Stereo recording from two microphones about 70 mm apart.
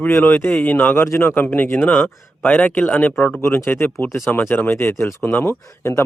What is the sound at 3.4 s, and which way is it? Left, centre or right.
Speech, left.